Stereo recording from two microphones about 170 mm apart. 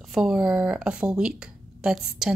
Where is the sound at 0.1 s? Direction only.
Centre (ahead or behind).